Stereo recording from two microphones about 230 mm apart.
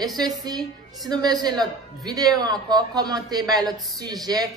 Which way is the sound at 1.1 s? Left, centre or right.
Centre.